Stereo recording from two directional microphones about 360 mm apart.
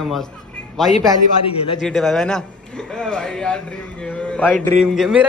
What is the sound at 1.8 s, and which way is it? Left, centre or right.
A man's voice, centre.